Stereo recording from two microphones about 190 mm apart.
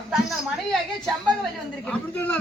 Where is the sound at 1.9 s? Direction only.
5° left (ahead or behind).